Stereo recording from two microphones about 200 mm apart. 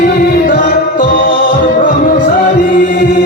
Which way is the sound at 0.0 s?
45° left (ahead or behind).